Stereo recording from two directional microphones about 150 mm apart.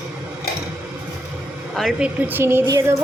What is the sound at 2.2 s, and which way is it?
Speech, 15° right (ahead or behind).